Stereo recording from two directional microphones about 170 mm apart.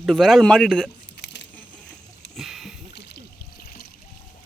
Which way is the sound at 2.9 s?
75° left (ahead or behind).